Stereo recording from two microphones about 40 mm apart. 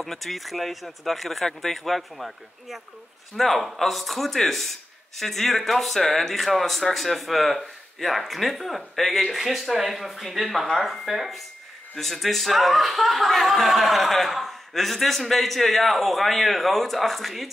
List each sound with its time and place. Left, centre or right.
0.0 s speech: centre